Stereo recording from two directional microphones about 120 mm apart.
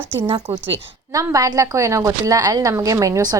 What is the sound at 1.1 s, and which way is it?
A woman's voice, 30° right (ahead or behind).